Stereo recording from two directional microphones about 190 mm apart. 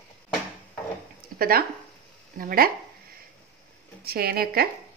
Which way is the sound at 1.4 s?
50° right (ahead or behind).